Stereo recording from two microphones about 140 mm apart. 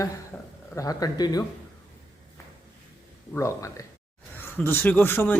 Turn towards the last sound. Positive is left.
turn(degrees=15)  # may be behind; listen again after turning